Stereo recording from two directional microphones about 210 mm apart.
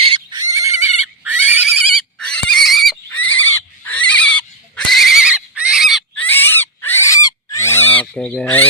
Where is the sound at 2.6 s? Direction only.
Centre (ahead or behind).